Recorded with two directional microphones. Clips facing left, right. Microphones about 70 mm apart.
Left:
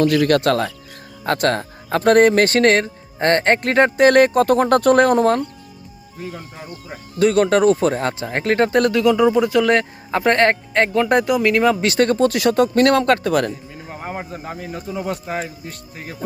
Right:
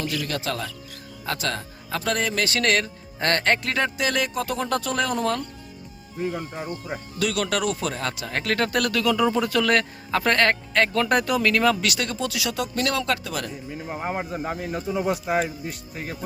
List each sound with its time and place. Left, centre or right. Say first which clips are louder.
0.0 s speech: left 13 dB; left
3.6 s speech: left 11 dB; left
6.1 s speech: right 4 dB; centre
7.2 s speech: left 11 dB; left
11.9 s speech: left 11 dB; left
13.7 s speech: right 1 dB; centre